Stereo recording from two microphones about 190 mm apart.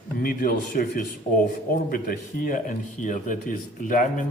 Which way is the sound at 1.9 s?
50° left (ahead or behind).